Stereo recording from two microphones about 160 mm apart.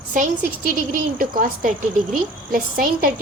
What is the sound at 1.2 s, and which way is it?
A woman's voice, 60° right (ahead or behind).